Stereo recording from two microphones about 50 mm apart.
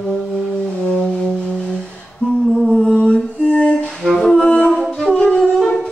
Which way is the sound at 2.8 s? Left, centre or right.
Centre.